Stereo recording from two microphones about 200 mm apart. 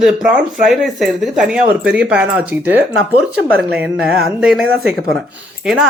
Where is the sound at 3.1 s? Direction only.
50° right (ahead or behind).